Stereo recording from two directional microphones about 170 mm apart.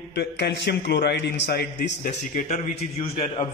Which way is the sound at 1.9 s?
45° left (ahead or behind).